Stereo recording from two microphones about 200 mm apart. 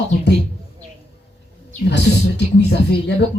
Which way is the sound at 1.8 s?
60° left (ahead or behind).